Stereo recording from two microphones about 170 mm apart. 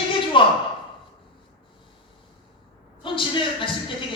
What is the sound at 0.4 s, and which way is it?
Speech, 30° left (ahead or behind).